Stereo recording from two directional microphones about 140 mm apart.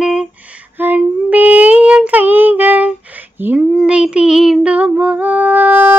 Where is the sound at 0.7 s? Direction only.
10° right (ahead or behind).